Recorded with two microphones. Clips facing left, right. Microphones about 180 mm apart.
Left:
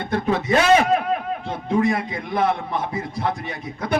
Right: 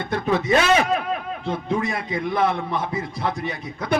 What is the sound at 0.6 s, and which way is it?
A man's voice, 50° left (ahead or behind).